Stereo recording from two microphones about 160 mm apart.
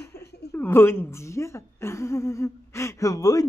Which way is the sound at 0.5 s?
15° left (ahead or behind).